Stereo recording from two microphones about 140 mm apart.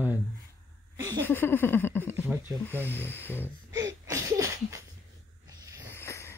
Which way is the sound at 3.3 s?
15° right (ahead or behind).